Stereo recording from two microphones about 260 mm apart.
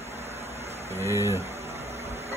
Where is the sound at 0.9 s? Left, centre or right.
Centre.